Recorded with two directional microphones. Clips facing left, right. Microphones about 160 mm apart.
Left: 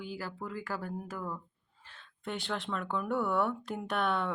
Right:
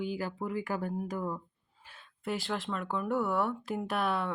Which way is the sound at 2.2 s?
5° right (ahead or behind).